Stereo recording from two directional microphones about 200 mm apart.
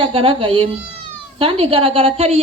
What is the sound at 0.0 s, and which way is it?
A woman's voice, 30° right (ahead or behind).